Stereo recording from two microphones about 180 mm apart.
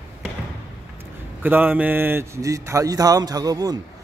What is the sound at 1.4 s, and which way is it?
A man's voice, 10° right (ahead or behind).